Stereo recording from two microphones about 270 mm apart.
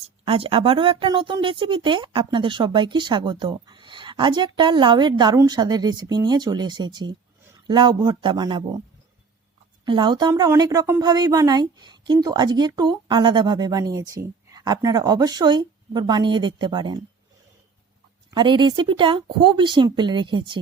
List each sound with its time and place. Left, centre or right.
0.3 s speech: centre
9.8 s speech: centre
18.3 s speech: centre